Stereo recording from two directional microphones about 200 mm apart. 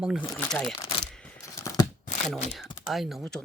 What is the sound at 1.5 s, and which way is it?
Scissors, 15° left (ahead or behind).